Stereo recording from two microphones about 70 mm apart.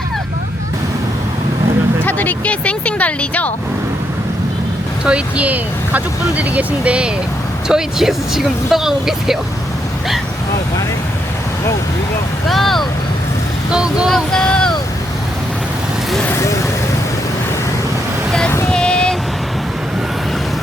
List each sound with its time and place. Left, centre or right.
2.0 s speech: left
5.0 s speech: centre
12.5 s speech: centre
13.7 s speech: centre
14.3 s vehicle: centre
16.3 s speech: left
18.7 s vehicle: centre